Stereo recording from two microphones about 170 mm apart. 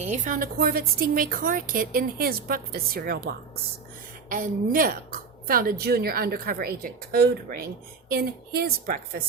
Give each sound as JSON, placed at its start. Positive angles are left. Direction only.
{"t": 0.0, "sound": "a woman's voice", "side_deg": -45}
{"t": 4.3, "sound": "a woman's voice", "side_deg": -55}